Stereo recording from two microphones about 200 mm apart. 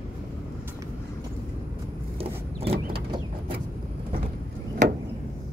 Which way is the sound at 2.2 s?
30° right (ahead or behind).